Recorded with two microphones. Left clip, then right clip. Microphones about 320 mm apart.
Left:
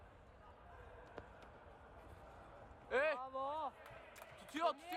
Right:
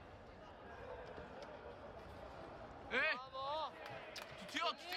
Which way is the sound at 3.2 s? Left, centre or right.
Centre.